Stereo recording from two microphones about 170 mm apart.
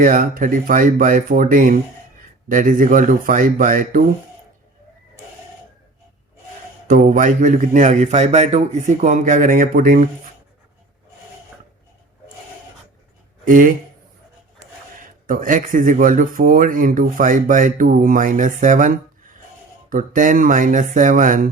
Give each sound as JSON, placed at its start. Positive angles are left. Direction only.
{"t": 0.0, "sound": "speech", "side_deg": -55}
{"t": 7.1, "sound": "speech", "side_deg": -50}
{"t": 13.4, "sound": "speech", "side_deg": -50}
{"t": 15.3, "sound": "speech", "side_deg": -55}